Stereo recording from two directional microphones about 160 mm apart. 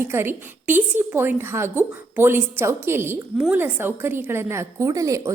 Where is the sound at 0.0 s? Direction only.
15° right (ahead or behind).